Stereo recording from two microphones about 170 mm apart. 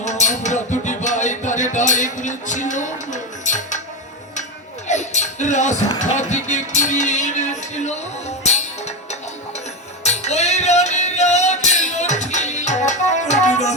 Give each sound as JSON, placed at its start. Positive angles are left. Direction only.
{"t": 0.0, "sound": "music", "side_deg": 45}
{"t": 4.9, "sound": "music", "side_deg": 45}